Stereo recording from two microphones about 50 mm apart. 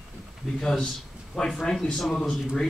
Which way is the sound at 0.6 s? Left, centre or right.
Centre.